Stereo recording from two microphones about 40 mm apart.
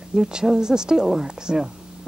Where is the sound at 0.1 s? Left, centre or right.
Centre.